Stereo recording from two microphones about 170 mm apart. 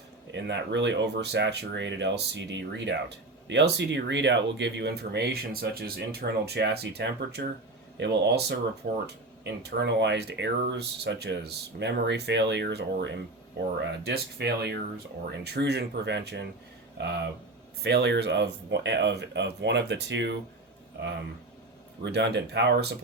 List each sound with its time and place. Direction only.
0.3 s speech: 90° right; by 7.4 s 75° right (ahead or behind)
7.9 s speech: 90° right
17.8 s speech: 75° right (ahead or behind)
22.0 s speech: 90° right